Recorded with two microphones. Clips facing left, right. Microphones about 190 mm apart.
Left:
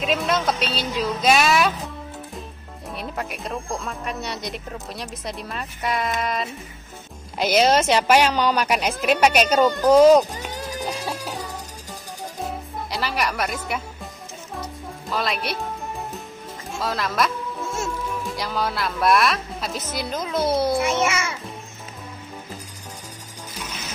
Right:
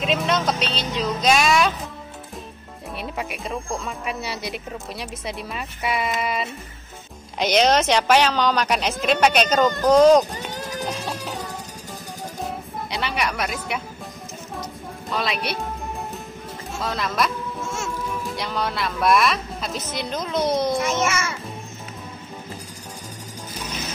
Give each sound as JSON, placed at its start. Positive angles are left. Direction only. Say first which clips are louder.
{"t": 0.0, "sound": "speech", "louder": "even", "side_deg": 0}
{"t": 3.0, "sound": "speech", "louder": "even", "side_deg": 0}
{"t": 12.4, "sound": "music", "louder": "even", "side_deg": 0}
{"t": 19.9, "sound": "speech", "louder": "even", "side_deg": 5}